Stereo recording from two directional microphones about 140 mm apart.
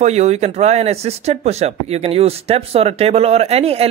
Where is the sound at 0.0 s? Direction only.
50° right (ahead or behind).